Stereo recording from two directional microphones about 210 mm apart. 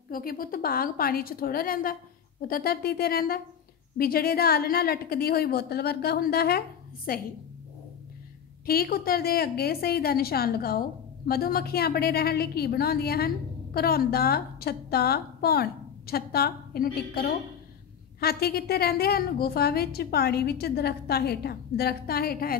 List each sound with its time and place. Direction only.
0.1 s a woman's voice: 45° left (ahead or behind)
8.6 s a woman's voice: 45° left (ahead or behind)